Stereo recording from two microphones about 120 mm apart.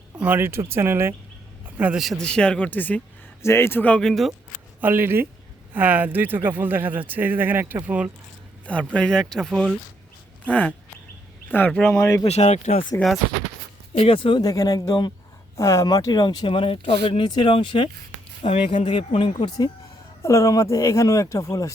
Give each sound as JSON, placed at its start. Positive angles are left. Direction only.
{"t": 0.2, "sound": "speech", "side_deg": -15}
{"t": 1.6, "sound": "a sound", "side_deg": -10}
{"t": 2.0, "sound": "speech", "side_deg": 0}
{"t": 4.8, "sound": "speech", "side_deg": -20}
{"t": 8.6, "sound": "speech", "side_deg": 10}
{"t": 11.5, "sound": "speech", "side_deg": 10}
{"t": 12.3, "sound": "speech", "side_deg": 70}
{"t": 13.9, "sound": "speech", "side_deg": 50}
{"t": 14.4, "sound": "speech", "side_deg": 25}
{"t": 19.5, "sound": "speech", "side_deg": 35}